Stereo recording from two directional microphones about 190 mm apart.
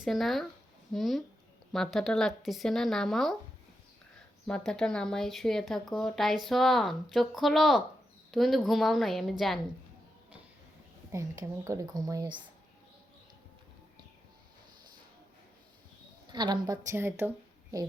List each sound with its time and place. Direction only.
0.0 s speech: centre (ahead or behind)
4.4 s speech: 5° left (ahead or behind)
11.1 s speech: 15° right (ahead or behind)
16.3 s a woman's voice: 25° right (ahead or behind)
16.9 s speech: 10° right (ahead or behind)